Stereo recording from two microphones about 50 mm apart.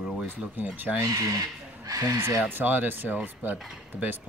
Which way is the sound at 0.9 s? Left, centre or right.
Right.